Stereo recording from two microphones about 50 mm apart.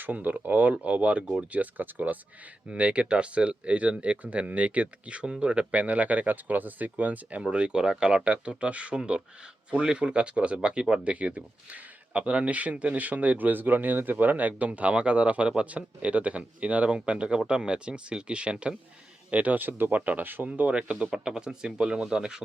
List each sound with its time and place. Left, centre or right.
0.0 s speech: right
2.6 s speech: right
7.5 s speech: centre; by 20.5 s right
20.5 s speech: right